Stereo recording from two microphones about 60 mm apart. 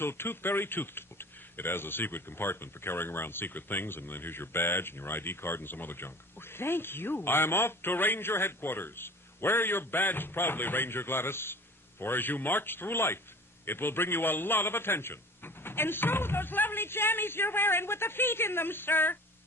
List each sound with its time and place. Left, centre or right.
0.0 s speech: left